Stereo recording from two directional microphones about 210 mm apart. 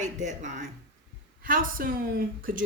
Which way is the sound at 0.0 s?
35° right (ahead or behind).